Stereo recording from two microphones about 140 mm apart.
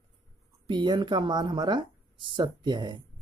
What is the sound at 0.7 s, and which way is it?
Speech, 35° right (ahead or behind).